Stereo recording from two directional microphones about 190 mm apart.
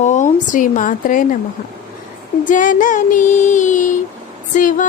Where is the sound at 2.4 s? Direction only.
45° left (ahead or behind).